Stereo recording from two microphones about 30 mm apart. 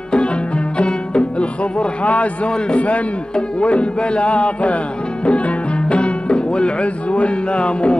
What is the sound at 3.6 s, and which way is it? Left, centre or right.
A man's voice, left.